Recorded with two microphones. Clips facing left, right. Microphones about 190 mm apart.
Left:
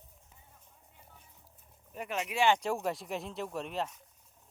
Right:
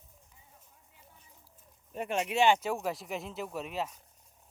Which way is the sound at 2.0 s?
25° right (ahead or behind).